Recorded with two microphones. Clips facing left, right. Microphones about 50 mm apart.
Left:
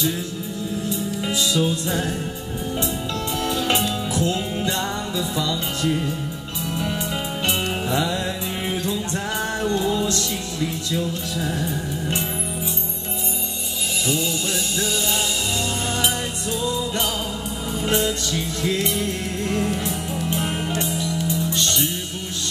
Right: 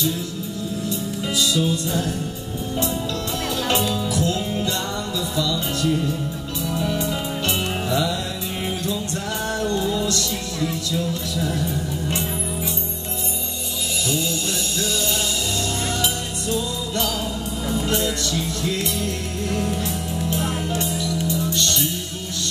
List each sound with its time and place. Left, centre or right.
0.8 s music: left
3.6 s music: left
17.8 s music: left